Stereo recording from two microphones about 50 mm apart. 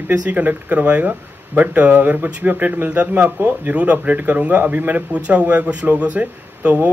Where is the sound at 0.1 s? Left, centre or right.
Right.